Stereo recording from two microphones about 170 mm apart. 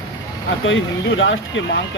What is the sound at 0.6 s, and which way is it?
Speech, 90° left.